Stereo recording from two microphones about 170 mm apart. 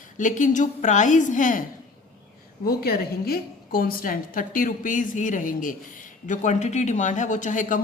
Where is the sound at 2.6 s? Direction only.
65° left (ahead or behind).